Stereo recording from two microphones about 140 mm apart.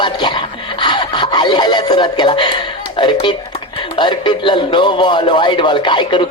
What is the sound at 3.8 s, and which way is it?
A man's voice, 35° left (ahead or behind).